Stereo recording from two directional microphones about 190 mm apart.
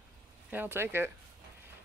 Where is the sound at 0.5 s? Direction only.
10° right (ahead or behind).